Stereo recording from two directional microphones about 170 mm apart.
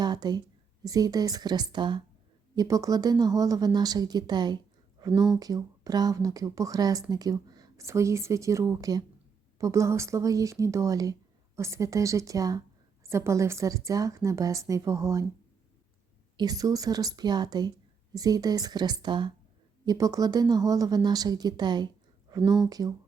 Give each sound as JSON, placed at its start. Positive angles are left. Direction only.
{"t": 0.0, "sound": "a woman's voice", "side_deg": -25}
{"t": 16.4, "sound": "speech", "side_deg": -20}